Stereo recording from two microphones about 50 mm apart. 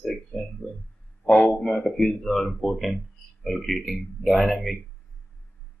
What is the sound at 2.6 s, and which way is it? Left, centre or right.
Speech, centre.